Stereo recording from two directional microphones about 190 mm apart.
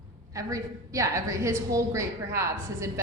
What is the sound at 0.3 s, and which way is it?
A woman's voice, 15° right (ahead or behind).